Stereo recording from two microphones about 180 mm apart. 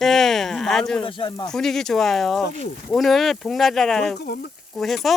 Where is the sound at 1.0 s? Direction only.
25° left (ahead or behind).